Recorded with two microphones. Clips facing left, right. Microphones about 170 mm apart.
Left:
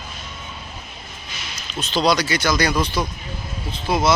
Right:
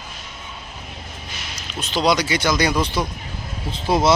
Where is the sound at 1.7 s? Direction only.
15° right (ahead or behind).